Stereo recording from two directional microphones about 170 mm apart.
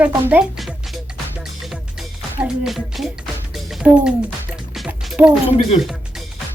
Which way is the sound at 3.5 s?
Centre (ahead or behind).